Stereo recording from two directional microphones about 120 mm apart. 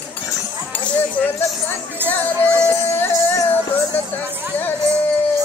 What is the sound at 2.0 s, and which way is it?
Speech, 15° right (ahead or behind).